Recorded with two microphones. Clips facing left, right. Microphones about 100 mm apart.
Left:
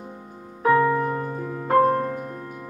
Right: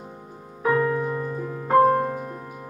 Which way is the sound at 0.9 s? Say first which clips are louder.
Left 1 dB; 55° left (ahead or behind).